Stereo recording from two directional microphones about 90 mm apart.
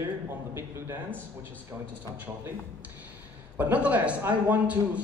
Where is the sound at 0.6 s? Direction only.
30° right (ahead or behind).